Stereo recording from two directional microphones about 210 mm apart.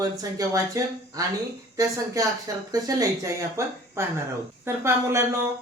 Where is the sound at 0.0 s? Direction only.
15° right (ahead or behind).